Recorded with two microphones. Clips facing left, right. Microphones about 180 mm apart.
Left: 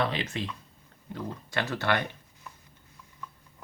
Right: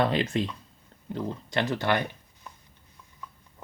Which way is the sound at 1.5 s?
15° right (ahead or behind).